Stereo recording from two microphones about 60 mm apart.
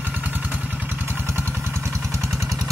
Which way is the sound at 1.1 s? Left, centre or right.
Right.